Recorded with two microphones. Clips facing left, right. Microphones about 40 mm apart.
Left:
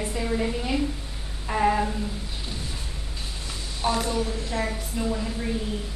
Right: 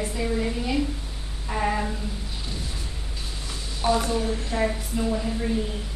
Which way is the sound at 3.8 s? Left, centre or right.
Centre.